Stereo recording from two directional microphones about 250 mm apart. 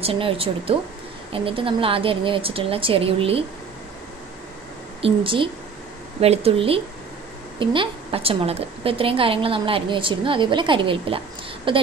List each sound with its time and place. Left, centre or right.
0.0 s a woman's voice: right
5.0 s a woman's voice: right